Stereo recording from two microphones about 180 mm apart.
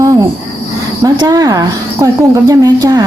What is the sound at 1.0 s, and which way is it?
A woman's voice, 20° right (ahead or behind).